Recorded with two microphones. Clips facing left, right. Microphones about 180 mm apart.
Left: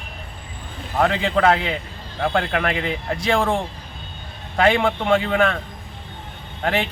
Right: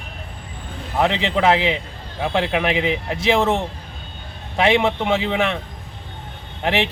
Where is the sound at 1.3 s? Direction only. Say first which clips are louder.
Right 1 dB; 20° right (ahead or behind).